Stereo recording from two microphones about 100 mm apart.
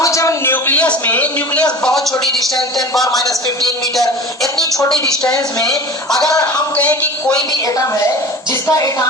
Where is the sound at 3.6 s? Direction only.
Centre (ahead or behind).